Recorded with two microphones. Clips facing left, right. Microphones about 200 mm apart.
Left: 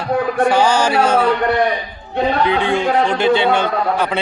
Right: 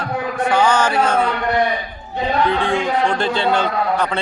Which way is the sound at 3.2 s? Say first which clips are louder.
Left 4 dB; 65° left (ahead or behind).